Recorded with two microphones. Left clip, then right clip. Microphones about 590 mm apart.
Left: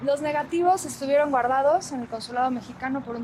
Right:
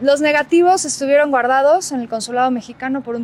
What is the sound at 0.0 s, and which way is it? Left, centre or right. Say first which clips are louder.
Speech: right 11 dB; right.